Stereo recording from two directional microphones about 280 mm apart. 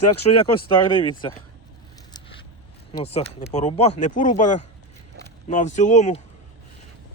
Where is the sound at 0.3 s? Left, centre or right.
Centre.